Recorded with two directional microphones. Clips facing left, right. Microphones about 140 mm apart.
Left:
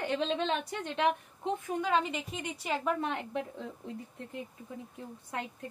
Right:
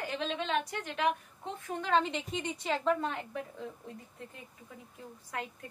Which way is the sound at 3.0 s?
20° left (ahead or behind).